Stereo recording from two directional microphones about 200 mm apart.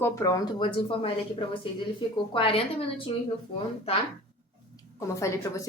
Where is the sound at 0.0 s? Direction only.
15° left (ahead or behind).